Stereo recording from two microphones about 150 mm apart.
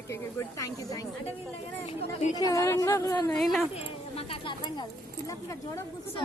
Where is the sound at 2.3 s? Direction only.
25° left (ahead or behind).